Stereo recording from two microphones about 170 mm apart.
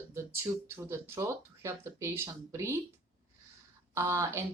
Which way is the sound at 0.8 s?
15° right (ahead or behind).